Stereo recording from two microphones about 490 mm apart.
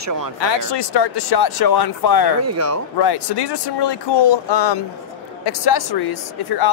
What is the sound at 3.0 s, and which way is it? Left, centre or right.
Speech, left.